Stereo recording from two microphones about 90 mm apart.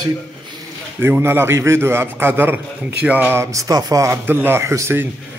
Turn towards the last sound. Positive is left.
turn(degrees=-30)  # may be behind; listen again after turning